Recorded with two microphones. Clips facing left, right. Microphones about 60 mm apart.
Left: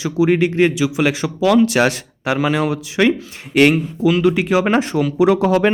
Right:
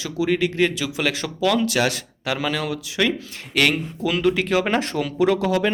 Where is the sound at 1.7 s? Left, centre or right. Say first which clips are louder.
Left 6 dB; left.